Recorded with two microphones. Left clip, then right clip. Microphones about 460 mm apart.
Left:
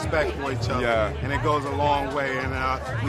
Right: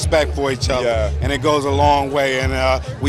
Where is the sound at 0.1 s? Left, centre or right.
Right.